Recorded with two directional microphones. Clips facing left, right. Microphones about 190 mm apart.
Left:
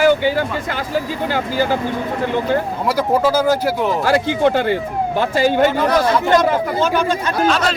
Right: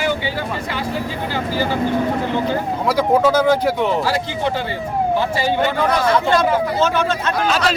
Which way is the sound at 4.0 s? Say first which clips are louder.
Left 5 dB; 55° left (ahead or behind).